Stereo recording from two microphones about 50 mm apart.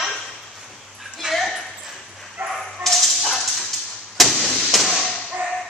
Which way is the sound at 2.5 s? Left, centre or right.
Centre.